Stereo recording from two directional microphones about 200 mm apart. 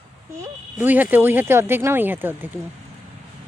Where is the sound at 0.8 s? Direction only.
10° right (ahead or behind).